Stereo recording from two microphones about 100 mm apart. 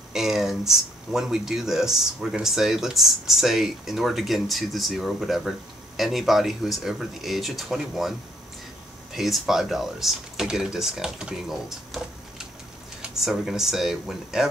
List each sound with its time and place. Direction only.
0.1 s speech: 5° right (ahead or behind)
9.1 s speech: centre (ahead or behind)